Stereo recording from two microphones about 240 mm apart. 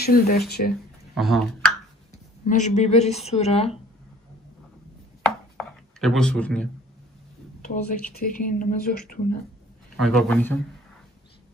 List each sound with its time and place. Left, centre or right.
0.0 s speech: left
1.1 s speech: centre
2.4 s speech: left
5.6 s a sound: centre
7.6 s speech: left
9.9 s a man's voice: centre